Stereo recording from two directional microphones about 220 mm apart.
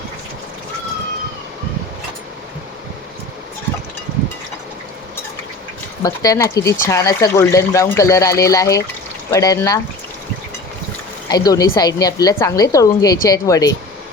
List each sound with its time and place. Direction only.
6.0 s speech: 15° left (ahead or behind)
11.3 s speech: 15° left (ahead or behind)